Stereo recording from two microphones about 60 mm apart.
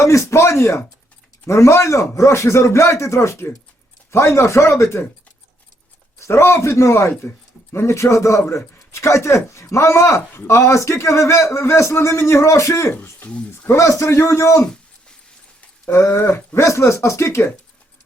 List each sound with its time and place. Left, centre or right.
0.0 s speech: left
6.1 s speech: left
12.9 s speech: left
13.2 s speech: left
13.7 s a man's voice: left
14.1 s speech: left
15.9 s a man's voice: left